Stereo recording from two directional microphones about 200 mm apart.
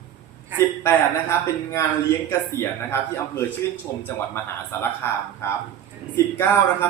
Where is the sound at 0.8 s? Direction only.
15° left (ahead or behind).